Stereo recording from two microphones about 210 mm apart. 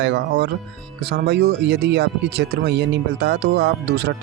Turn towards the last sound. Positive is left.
turn(degrees=-50)  # may be behind; listen again after turning